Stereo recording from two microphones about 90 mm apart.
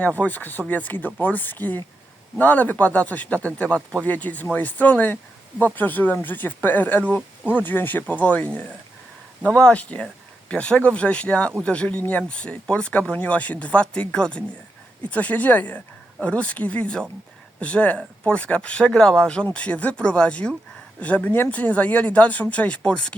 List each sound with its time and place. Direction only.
0.0 s speech: 15° left (ahead or behind)